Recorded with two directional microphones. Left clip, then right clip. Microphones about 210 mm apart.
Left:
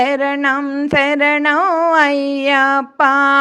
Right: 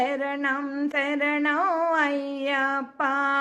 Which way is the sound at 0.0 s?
45° left (ahead or behind).